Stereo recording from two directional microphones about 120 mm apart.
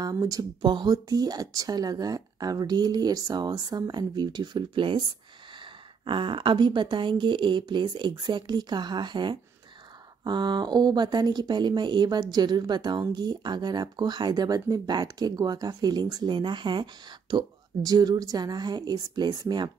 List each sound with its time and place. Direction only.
0.0 s speech: 30° right (ahead or behind)
6.0 s speech: 45° right (ahead or behind)